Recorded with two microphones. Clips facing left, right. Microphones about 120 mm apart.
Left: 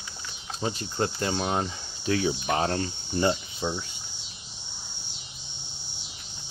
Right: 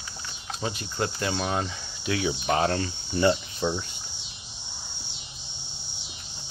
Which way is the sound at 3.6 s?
10° left (ahead or behind).